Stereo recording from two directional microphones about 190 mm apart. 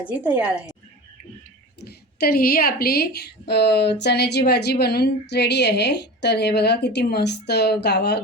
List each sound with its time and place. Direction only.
0.2 s a woman's voice: 10° right (ahead or behind)
1.8 s a woman's voice: 55° left (ahead or behind)